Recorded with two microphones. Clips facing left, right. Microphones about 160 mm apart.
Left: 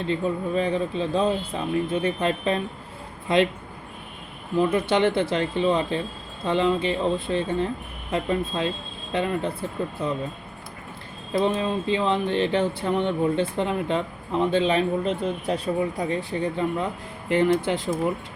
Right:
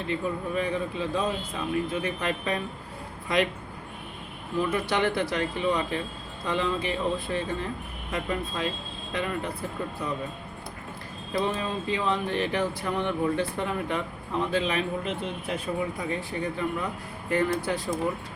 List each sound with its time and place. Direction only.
0.1 s speech: 30° left (ahead or behind)
4.6 s speech: 25° left (ahead or behind)
11.3 s speech: 25° left (ahead or behind)